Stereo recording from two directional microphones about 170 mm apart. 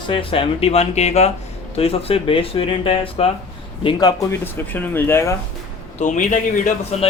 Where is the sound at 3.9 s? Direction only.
25° left (ahead or behind).